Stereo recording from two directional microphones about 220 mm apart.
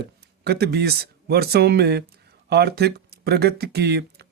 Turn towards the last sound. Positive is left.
turn(degrees=-45)  # may be behind; listen again after turning